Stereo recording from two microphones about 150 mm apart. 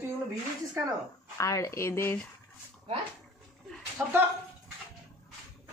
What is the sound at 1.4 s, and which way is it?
Speech, 20° left (ahead or behind).